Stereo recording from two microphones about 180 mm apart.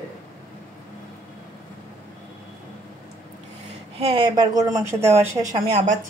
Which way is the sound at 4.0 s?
25° right (ahead or behind).